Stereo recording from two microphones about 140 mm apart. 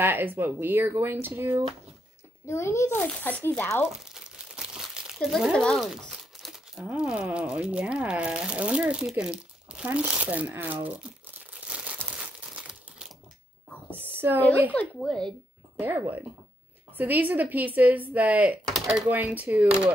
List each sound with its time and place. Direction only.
0.0 s speech: 15° right (ahead or behind)
2.4 s a child's voice: 20° left (ahead or behind)
3.8 s speech: 5° right (ahead or behind)
11.6 s crumpling: 10° right (ahead or behind)
14.0 s a sound: 15° right (ahead or behind)
14.7 s a child's voice: 10° left (ahead or behind)
15.8 s speech: 15° right (ahead or behind)